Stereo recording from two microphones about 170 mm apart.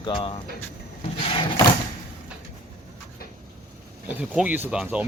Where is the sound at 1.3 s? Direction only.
30° left (ahead or behind).